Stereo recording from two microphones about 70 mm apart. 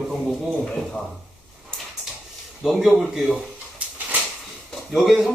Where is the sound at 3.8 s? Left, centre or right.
Centre.